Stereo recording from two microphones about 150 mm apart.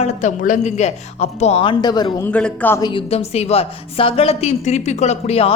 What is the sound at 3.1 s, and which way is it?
A woman's voice, 45° left (ahead or behind).